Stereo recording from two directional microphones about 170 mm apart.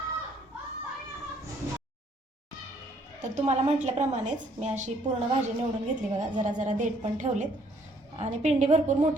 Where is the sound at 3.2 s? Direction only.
45° right (ahead or behind).